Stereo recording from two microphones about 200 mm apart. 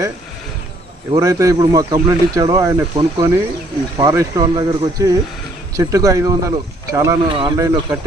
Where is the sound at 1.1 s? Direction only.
15° right (ahead or behind).